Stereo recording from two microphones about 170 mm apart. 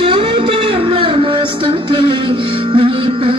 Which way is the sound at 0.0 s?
30° right (ahead or behind).